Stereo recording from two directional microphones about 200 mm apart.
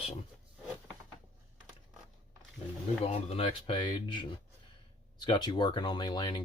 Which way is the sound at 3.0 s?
30° left (ahead or behind).